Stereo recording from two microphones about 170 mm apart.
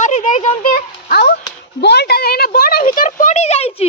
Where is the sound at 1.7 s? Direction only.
75° left (ahead or behind).